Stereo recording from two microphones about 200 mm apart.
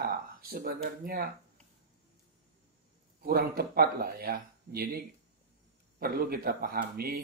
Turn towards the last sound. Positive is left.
turn(degrees=-50)  # may be behind; listen again after turning